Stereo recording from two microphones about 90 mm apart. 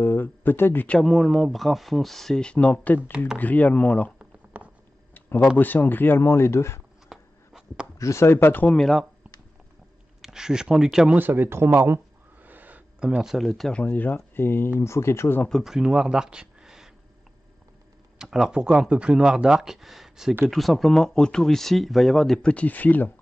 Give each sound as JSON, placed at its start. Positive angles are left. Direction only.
{"t": 0.0, "sound": "speech", "side_deg": 20}
{"t": 1.0, "sound": "speech", "side_deg": 0}
{"t": 4.6, "sound": "a sound", "side_deg": -15}
{"t": 5.1, "sound": "a sound", "side_deg": 25}
{"t": 5.6, "sound": "speech", "side_deg": 20}
{"t": 7.1, "sound": "a sound", "side_deg": -10}
{"t": 8.0, "sound": "speech", "side_deg": 30}
{"t": 8.7, "sound": "speech", "side_deg": 0}
{"t": 10.2, "sound": "speech", "side_deg": -5}
{"t": 11.1, "sound": "speech", "side_deg": -20}
{"t": 12.4, "sound": "a sound", "side_deg": -20}
{"t": 13.1, "sound": "speech", "side_deg": -5}
{"t": 15.6, "sound": "speech", "side_deg": -5}
{"t": 18.2, "sound": "speech", "side_deg": -5}